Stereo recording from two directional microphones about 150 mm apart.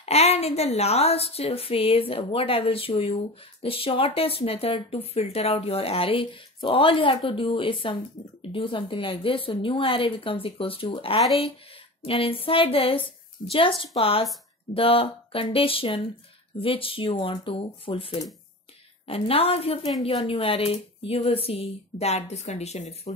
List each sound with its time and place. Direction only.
0.0 s speech: 45° left (ahead or behind)